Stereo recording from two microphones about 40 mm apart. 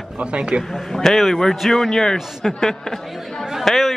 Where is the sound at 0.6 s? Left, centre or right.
Centre.